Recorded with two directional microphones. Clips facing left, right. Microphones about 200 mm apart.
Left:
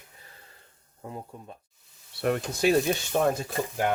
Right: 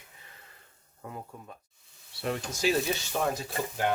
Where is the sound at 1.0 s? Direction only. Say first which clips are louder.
Left 3 dB; 20° left (ahead or behind).